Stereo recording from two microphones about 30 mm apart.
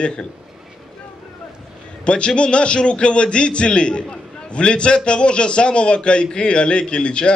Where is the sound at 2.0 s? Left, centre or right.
Left.